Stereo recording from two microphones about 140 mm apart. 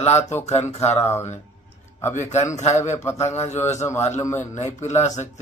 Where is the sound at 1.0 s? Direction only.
20° left (ahead or behind).